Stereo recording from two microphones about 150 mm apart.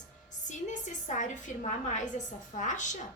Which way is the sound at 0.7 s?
55° left (ahead or behind).